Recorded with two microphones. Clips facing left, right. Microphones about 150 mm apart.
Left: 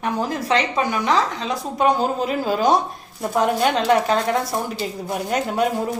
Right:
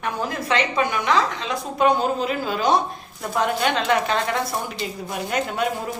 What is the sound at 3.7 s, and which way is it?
Speech, 40° left (ahead or behind).